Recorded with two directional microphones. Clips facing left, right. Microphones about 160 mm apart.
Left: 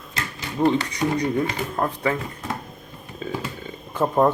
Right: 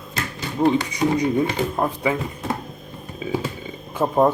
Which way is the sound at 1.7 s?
10° right (ahead or behind).